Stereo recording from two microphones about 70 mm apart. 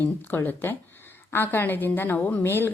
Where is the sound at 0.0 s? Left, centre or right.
Left.